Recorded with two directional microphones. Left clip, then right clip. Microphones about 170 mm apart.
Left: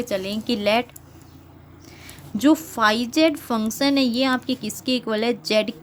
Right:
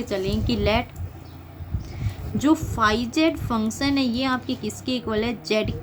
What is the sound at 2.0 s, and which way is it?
A woman's voice, 45° left (ahead or behind).